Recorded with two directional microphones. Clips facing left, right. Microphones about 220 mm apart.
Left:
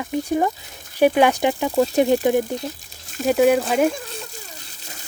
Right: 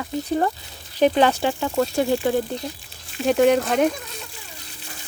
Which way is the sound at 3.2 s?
5° left (ahead or behind).